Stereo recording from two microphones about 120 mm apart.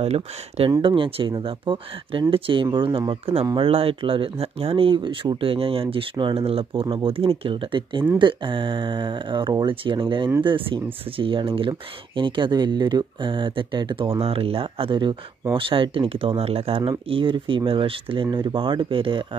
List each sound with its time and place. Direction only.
0.0 s speech: 60° right (ahead or behind)
0.7 s speech: 45° right (ahead or behind)